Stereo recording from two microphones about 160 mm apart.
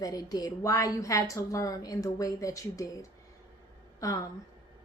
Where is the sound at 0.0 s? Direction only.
25° left (ahead or behind).